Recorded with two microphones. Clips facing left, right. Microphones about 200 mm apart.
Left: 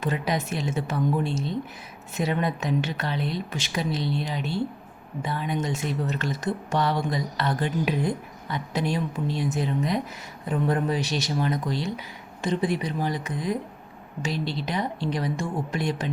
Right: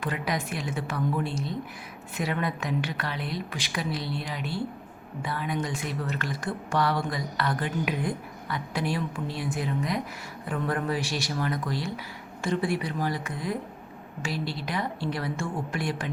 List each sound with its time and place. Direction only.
0.0 s speech: 25° left (ahead or behind)